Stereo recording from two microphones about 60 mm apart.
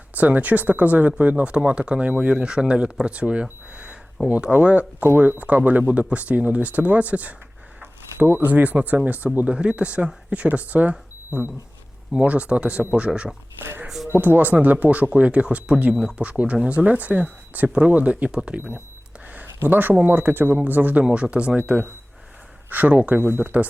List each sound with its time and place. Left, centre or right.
0.2 s speech: right; by 14.1 s centre
14.2 s speech: right
19.6 s speech: right
21.0 s speech: centre
22.7 s speech: right